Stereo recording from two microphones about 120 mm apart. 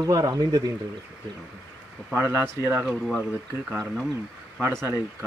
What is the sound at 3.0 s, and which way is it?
Speech, centre (ahead or behind).